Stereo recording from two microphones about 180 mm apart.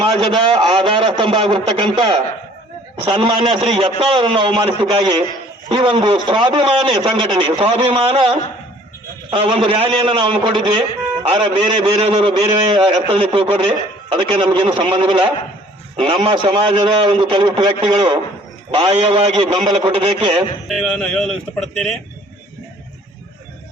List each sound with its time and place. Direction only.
0.2 s a man's voice: 25° right (ahead or behind)
20.7 s speech: centre (ahead or behind)